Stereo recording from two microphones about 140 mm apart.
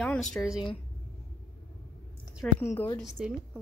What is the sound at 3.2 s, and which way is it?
Speech, 5° right (ahead or behind).